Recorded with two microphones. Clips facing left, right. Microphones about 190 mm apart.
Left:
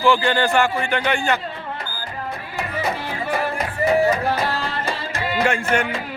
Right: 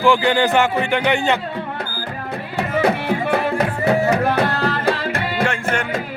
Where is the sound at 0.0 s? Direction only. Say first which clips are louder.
Right 2 dB; 15° right (ahead or behind).